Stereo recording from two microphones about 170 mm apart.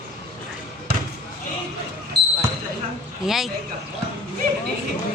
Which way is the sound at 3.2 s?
Centre (ahead or behind).